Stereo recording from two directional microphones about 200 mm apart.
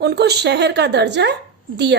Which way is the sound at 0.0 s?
55° right (ahead or behind).